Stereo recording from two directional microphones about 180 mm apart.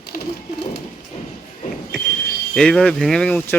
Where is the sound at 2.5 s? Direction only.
5° left (ahead or behind).